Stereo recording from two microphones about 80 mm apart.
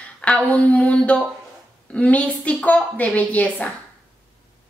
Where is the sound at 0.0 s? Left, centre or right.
Centre.